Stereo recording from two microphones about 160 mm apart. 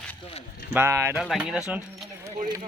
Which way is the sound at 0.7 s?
15° right (ahead or behind).